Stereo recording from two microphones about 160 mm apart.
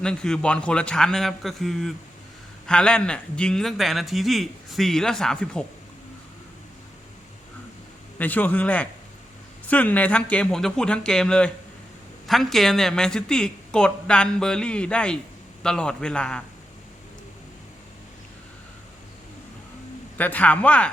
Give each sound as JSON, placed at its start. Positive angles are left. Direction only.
{"t": 0.0, "sound": "a man's voice", "side_deg": 5}
{"t": 8.2, "sound": "a man's voice", "side_deg": 10}
{"t": 20.1, "sound": "speech", "side_deg": 10}